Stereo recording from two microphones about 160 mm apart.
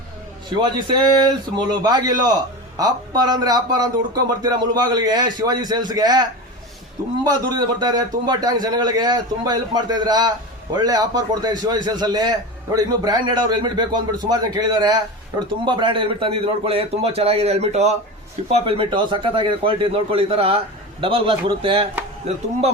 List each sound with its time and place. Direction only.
0.5 s a man's voice: 30° right (ahead or behind)
7.3 s a man's voice: 25° right (ahead or behind); by 17.9 s 40° right (ahead or behind)
18.6 s a man's voice: 30° right (ahead or behind)